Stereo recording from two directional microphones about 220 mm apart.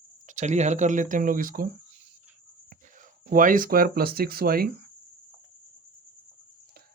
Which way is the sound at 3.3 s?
40° right (ahead or behind).